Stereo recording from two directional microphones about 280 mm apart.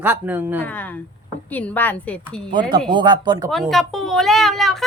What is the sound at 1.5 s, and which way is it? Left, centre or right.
Speech, centre.